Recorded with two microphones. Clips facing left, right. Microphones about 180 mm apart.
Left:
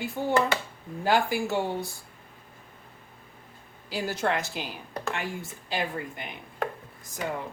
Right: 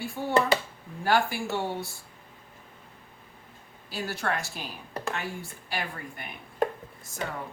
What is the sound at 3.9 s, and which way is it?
A woman's voice, 15° left (ahead or behind).